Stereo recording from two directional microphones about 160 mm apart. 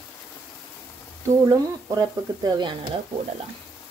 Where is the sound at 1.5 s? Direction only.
20° right (ahead or behind).